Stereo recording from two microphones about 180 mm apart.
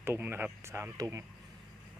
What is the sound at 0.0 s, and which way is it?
Speech, 15° right (ahead or behind).